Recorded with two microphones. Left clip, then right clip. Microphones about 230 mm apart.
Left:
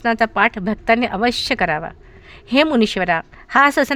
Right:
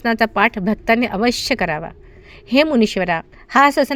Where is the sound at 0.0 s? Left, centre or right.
Centre.